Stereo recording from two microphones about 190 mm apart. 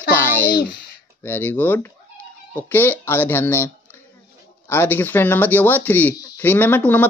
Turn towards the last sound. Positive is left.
turn(degrees=10)  # may be behind; listen again after turning